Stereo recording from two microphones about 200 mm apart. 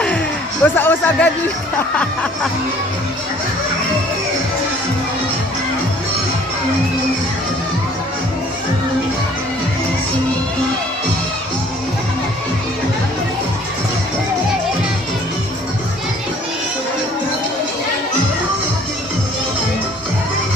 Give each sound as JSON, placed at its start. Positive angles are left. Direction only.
{"t": 0.6, "sound": "a man's voice", "side_deg": 10}